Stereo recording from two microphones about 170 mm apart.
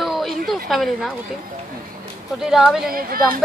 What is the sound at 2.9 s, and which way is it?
Speech, 60° right (ahead or behind).